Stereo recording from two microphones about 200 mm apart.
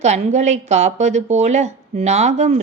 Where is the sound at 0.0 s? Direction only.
35° right (ahead or behind).